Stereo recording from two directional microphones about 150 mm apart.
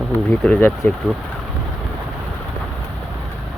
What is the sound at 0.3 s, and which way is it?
Speech, 5° left (ahead or behind).